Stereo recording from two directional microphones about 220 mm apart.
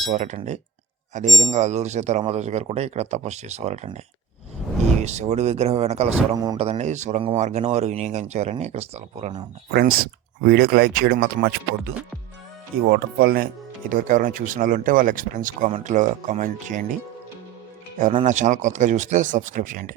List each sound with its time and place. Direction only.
0.0 s speech: 35° right (ahead or behind)
5.0 s speech: 30° right (ahead or behind)
6.3 s speech: 15° right (ahead or behind)
6.7 s speech: 30° right (ahead or behind)
9.7 s speech: 45° right (ahead or behind)
17.9 s speech: 35° right (ahead or behind)